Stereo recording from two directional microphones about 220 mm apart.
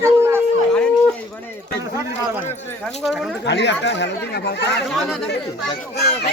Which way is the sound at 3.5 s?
50° left (ahead or behind).